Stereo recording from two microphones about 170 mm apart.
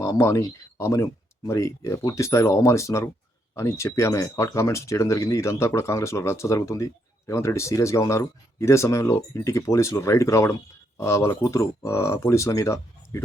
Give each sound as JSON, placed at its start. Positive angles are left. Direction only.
{"t": 0.0, "sound": "speech", "side_deg": 15}